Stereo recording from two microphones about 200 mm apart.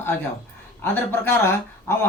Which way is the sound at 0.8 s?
10° left (ahead or behind).